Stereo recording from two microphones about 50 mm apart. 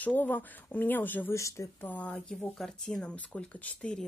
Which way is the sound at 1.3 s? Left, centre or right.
Left.